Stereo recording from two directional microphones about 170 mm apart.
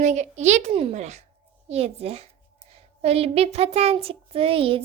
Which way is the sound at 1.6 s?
35° right (ahead or behind).